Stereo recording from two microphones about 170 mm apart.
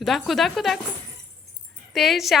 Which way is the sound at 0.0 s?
Centre (ahead or behind).